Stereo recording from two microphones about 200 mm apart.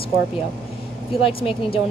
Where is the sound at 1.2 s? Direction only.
25° left (ahead or behind).